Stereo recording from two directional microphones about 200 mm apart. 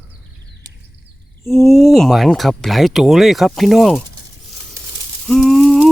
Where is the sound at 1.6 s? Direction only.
Centre (ahead or behind).